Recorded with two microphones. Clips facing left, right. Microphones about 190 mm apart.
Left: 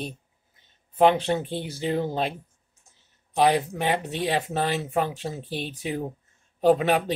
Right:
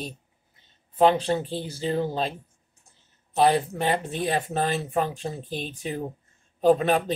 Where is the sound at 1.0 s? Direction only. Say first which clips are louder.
Even; 15° left (ahead or behind).